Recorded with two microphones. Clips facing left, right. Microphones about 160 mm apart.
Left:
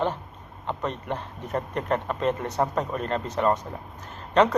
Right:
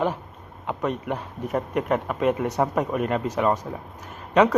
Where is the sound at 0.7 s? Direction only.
5° right (ahead or behind).